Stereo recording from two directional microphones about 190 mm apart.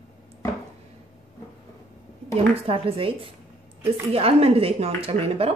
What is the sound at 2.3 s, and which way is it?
Speech, 30° right (ahead or behind).